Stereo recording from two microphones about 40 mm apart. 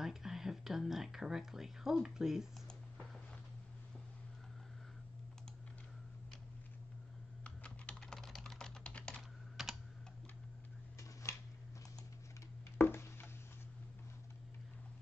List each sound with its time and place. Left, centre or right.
0.0 s a sound: centre
7.4 s computer keyboard: left
8.1 s typing: centre
8.5 s typing: centre
9.1 s computer keyboard: centre
12.7 s a sound: left